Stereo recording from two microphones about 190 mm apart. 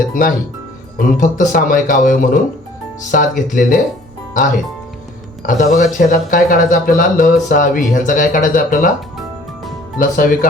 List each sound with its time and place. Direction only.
0.1 s speech: 45° left (ahead or behind)
5.4 s speech: 40° left (ahead or behind)
10.0 s speech: 45° left (ahead or behind)